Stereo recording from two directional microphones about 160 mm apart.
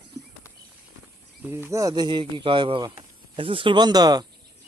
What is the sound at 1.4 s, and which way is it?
Speech, 15° right (ahead or behind).